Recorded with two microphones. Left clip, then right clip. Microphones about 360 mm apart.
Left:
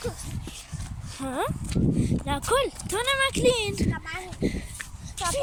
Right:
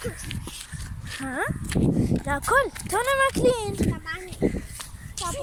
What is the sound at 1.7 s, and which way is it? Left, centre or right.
Speech, right.